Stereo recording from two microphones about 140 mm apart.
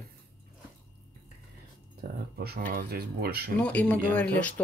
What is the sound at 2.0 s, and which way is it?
Speech, 80° right.